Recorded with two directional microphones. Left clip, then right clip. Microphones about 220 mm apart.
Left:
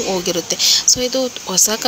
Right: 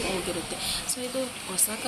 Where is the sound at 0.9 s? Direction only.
15° left (ahead or behind).